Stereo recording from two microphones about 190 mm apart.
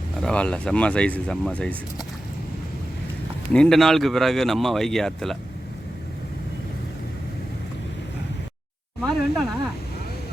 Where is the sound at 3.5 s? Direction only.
5° left (ahead or behind).